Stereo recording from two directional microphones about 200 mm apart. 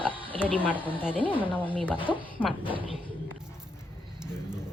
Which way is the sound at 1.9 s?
25° left (ahead or behind).